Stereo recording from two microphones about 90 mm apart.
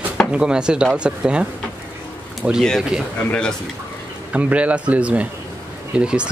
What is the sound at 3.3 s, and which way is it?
Speech, 10° left (ahead or behind).